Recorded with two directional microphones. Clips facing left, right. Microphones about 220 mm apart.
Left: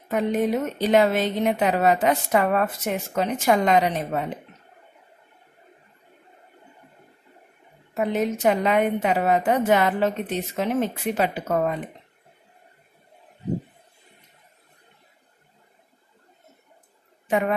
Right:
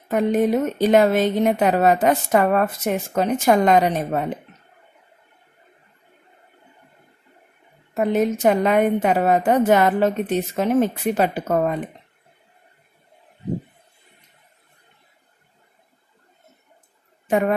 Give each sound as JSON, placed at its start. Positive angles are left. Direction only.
{"t": 0.1, "sound": "a woman's voice", "side_deg": -45}
{"t": 7.9, "sound": "a woman's voice", "side_deg": -45}
{"t": 17.3, "sound": "speech", "side_deg": -45}